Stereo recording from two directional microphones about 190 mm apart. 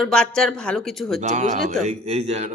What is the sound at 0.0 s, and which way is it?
Speech, 5° left (ahead or behind).